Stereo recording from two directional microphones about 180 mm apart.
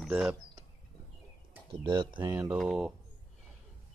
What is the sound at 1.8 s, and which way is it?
Speech, 25° right (ahead or behind).